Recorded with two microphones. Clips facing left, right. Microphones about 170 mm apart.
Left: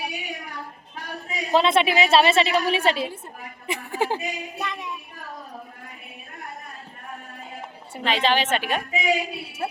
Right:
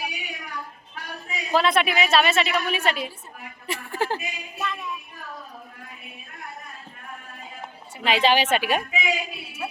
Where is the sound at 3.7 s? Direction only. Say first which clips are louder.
Left 2 dB; 15° left (ahead or behind).